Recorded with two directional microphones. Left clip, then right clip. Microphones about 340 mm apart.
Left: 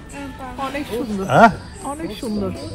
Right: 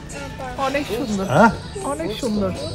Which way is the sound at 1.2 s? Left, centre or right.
Left.